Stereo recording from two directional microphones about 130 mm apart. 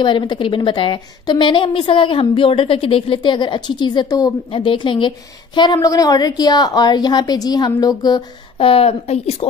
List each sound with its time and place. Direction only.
0.0 s a woman's voice: 35° left (ahead or behind)
5.6 s a woman's voice: 30° left (ahead or behind)
8.5 s speech: 45° left (ahead or behind)